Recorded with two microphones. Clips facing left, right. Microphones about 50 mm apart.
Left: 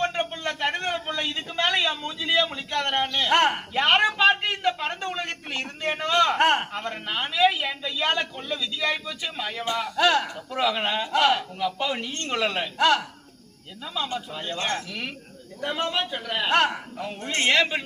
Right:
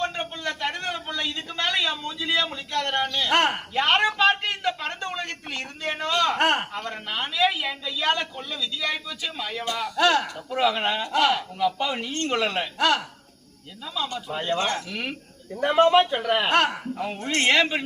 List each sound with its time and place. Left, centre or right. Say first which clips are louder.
0.0 s a sound: left 2 dB; left
0.9 s a man's voice: left 1 dB; left
3.2 s a man's voice: left 2 dB; centre
4.3 s a sound: left 1 dB; centre
6.7 s a man's voice: left 1 dB; centre
10.0 s speech: right 1 dB; centre
13.9 s a man's voice: even; centre
14.3 s a man's voice: right 6 dB; right
15.6 s a man's voice: right 9 dB; right
16.5 s speech: even; centre